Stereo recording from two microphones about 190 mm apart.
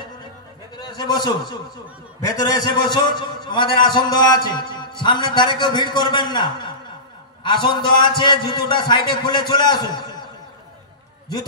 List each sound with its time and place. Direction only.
0.7 s a man's voice: 20° left (ahead or behind)